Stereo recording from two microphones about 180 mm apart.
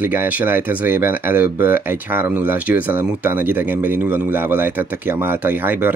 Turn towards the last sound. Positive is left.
turn(degrees=-10)  # may be behind; listen again after turning